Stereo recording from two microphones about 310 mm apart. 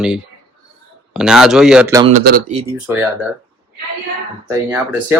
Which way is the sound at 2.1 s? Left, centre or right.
Right.